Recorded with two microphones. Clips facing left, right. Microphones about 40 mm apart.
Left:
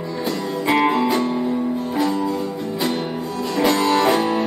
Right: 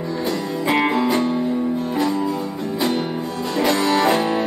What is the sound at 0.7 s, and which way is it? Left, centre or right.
Music, centre.